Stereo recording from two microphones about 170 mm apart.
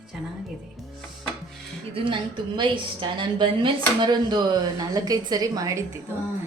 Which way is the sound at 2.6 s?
30° right (ahead or behind).